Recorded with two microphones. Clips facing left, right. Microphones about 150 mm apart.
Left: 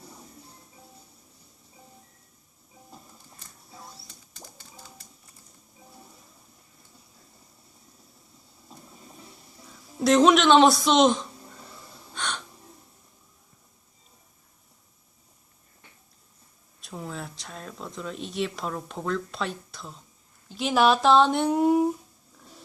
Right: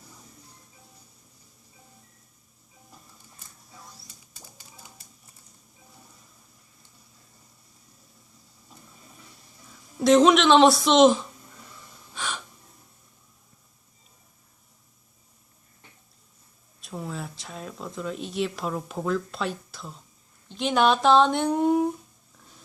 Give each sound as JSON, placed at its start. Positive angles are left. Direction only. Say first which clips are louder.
{"t": 3.8, "sound": "a sound", "louder": "left 3 dB", "side_deg": 30}
{"t": 10.0, "sound": "speech", "louder": "right 1 dB", "side_deg": 0}
{"t": 12.1, "sound": "gasp", "louder": "even", "side_deg": -5}
{"t": 16.8, "sound": "speech", "louder": "right 2 dB", "side_deg": 0}